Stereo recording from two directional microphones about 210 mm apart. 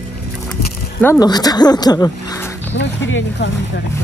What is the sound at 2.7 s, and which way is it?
Speech, 60° left (ahead or behind).